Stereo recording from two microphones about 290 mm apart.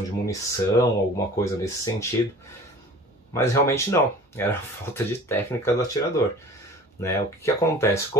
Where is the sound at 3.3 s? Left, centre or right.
Centre.